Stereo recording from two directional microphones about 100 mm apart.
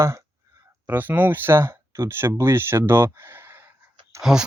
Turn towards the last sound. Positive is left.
turn(degrees=-5)  # may be behind; listen again after turning